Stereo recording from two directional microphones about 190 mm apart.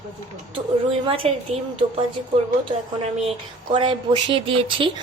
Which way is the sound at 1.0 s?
30° right (ahead or behind).